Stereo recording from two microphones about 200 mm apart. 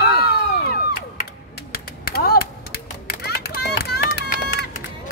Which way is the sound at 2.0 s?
50° left (ahead or behind).